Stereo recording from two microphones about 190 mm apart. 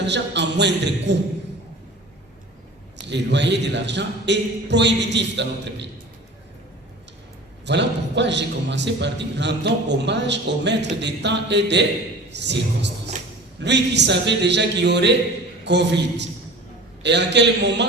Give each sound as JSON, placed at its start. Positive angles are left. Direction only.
{"t": 0.0, "sound": "a man's voice", "side_deg": -65}
{"t": 3.0, "sound": "a man's voice", "side_deg": -65}
{"t": 7.6, "sound": "a man's voice", "side_deg": -65}